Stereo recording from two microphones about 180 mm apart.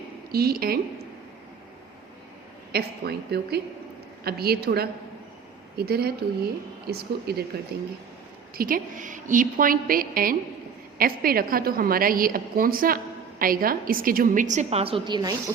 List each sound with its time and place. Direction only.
0.3 s a woman's voice: 55° right (ahead or behind)
2.7 s a woman's voice: 60° right (ahead or behind); by 15.4 s 20° right (ahead or behind)